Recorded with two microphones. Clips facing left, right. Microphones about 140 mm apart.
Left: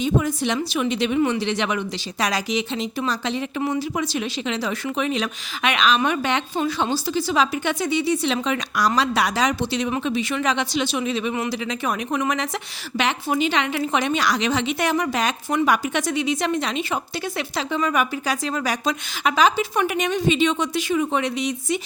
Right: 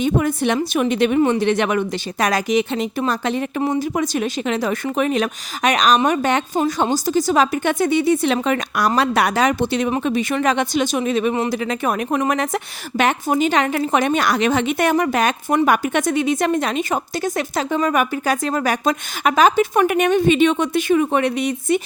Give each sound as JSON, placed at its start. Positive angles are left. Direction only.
{"t": 0.0, "sound": "speech", "side_deg": -55}